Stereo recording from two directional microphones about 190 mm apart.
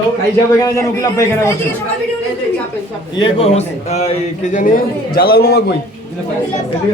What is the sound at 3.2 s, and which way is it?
A man's voice, 35° left (ahead or behind).